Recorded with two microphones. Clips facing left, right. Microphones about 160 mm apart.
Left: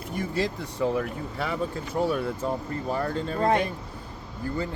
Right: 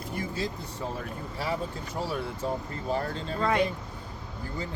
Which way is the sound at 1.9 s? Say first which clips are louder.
Left 7 dB; 60° left (ahead or behind).